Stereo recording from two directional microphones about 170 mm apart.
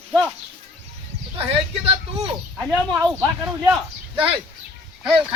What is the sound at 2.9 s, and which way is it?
Speech, 15° right (ahead or behind).